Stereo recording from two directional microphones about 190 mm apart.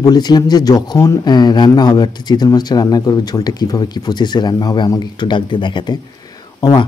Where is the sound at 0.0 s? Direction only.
20° left (ahead or behind).